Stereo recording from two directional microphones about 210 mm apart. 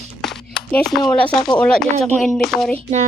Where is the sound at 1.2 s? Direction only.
5° left (ahead or behind).